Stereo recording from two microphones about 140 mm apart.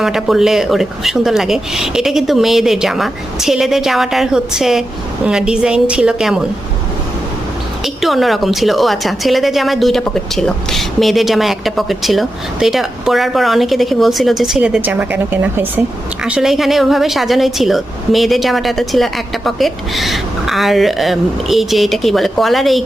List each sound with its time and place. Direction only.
0.0 s a woman's voice: 5° right (ahead or behind)
8.0 s a woman's voice: centre (ahead or behind)